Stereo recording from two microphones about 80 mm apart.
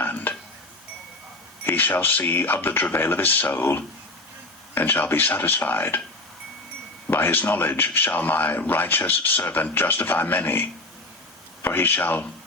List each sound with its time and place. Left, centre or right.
0.0 s a sound: left
1.6 s speech: left
7.1 s speech: left